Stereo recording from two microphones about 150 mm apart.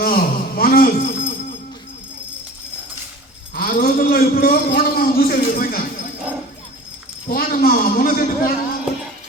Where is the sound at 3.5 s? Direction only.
75° left (ahead or behind).